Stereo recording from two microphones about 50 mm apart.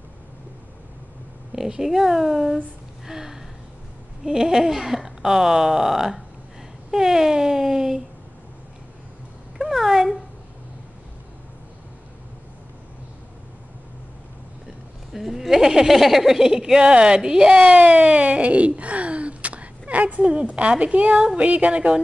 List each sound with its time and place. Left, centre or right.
1.5 s speech: centre
3.1 s a sound: centre
4.2 s speech: centre
9.6 s cat: centre
15.1 s speech: centre
17.6 s a woman's voice: right